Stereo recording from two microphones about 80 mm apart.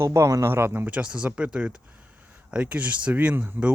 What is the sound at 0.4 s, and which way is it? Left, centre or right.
Speech, right.